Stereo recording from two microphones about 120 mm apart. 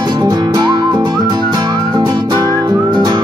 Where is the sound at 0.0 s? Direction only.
35° right (ahead or behind).